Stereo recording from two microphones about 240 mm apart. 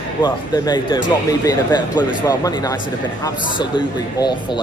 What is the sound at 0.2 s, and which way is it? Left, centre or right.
Speech, centre.